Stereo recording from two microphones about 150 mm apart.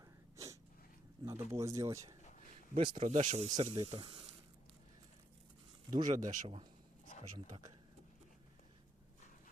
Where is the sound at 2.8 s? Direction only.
35° right (ahead or behind).